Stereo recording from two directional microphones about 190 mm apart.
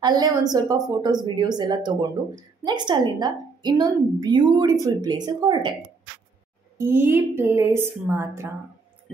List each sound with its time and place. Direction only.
0.0 s a woman's voice: 20° right (ahead or behind)
6.8 s a woman's voice: 10° right (ahead or behind)